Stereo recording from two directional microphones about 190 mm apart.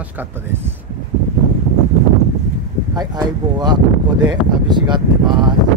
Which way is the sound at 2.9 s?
20° right (ahead or behind).